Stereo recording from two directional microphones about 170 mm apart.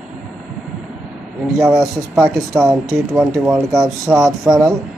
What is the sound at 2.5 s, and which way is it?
Speech, 15° right (ahead or behind).